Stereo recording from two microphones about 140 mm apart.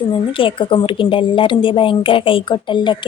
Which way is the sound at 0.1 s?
40° left (ahead or behind).